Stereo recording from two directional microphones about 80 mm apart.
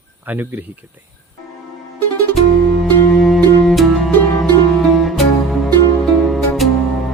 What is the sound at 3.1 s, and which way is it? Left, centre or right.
Music, centre.